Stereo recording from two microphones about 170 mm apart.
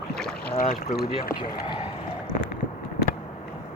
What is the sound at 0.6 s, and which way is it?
Boat, 50° left (ahead or behind).